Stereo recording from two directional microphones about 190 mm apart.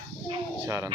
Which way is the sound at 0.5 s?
10° right (ahead or behind).